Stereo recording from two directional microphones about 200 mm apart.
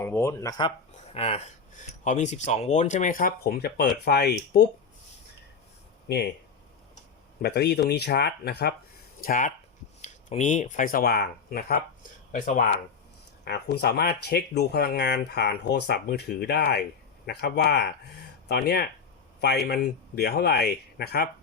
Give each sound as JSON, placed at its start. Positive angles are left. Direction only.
{"t": 0.0, "sound": "speech", "side_deg": 15}
{"t": 1.1, "sound": "speech", "side_deg": 30}
{"t": 7.4, "sound": "speech", "side_deg": 55}
{"t": 9.2, "sound": "speech", "side_deg": 40}
{"t": 13.4, "sound": "speech", "side_deg": 55}